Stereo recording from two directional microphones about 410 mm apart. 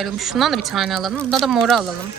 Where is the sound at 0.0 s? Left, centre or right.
Centre.